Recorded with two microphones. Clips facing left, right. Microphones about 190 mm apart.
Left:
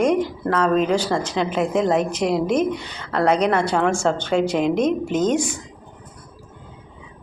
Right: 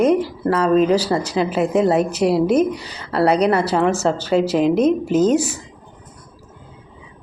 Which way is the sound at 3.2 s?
35° right (ahead or behind).